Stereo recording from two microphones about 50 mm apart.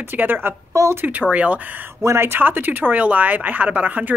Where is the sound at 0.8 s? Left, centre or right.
Right.